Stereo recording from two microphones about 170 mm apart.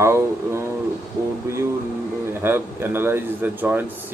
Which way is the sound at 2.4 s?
15° right (ahead or behind).